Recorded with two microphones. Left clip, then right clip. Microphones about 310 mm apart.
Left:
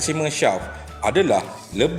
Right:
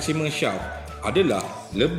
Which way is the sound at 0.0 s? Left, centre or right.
Centre.